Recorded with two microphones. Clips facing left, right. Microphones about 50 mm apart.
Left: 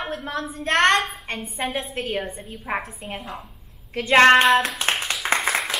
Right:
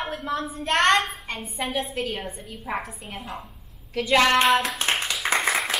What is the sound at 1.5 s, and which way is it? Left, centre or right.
A woman's voice, left.